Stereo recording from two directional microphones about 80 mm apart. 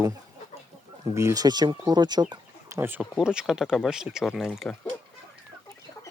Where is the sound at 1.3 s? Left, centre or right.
Right.